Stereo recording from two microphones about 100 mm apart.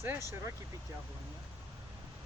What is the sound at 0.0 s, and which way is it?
Speech, 25° right (ahead or behind).